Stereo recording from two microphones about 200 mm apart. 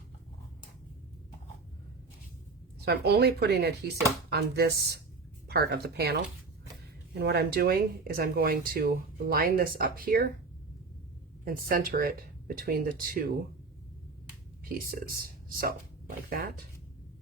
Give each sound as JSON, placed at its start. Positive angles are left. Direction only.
{"t": 2.8, "sound": "speech", "side_deg": -55}
{"t": 11.4, "sound": "speech", "side_deg": -45}
{"t": 14.6, "sound": "speech", "side_deg": -45}